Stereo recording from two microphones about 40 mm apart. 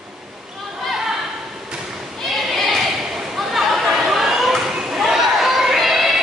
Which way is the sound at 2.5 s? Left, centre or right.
Centre.